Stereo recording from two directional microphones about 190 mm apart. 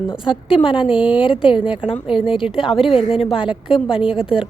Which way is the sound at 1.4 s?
25° left (ahead or behind).